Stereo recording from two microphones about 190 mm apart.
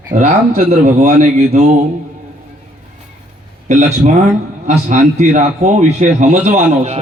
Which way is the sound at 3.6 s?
40° right (ahead or behind).